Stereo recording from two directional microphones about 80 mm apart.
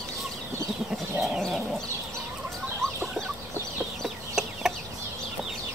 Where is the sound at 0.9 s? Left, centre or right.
Centre.